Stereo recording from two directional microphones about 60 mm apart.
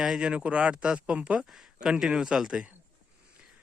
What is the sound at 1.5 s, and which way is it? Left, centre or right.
Speech, centre.